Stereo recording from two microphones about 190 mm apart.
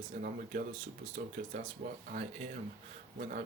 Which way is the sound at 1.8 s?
40° right (ahead or behind).